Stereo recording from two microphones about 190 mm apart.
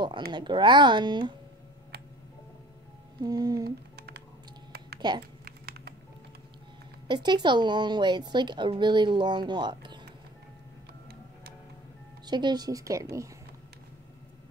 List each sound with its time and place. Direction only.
0.3 s a woman's voice: 25° right (ahead or behind)
3.2 s a woman's voice: 20° right (ahead or behind)
3.6 s typing: 55° right (ahead or behind)
4.7 s a sound: 55° right (ahead or behind)
5.4 s typing: 55° right (ahead or behind)
7.1 s a woman's voice: 20° right (ahead or behind)
12.3 s a woman's voice: 20° right (ahead or behind)